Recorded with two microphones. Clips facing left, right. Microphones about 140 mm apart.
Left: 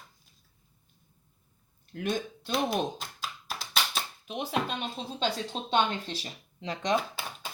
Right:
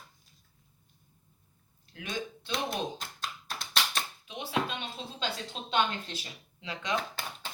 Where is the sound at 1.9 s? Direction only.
50° left (ahead or behind).